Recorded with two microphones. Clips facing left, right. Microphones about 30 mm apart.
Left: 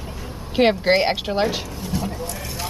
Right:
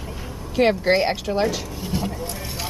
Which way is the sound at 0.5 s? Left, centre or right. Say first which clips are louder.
Left 1 dB; left.